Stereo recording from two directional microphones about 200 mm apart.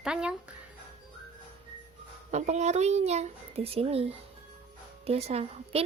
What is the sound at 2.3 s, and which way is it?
Speech, 35° right (ahead or behind).